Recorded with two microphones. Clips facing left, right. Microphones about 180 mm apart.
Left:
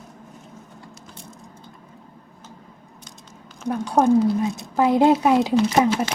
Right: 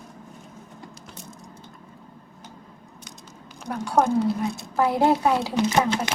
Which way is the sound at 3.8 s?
20° left (ahead or behind).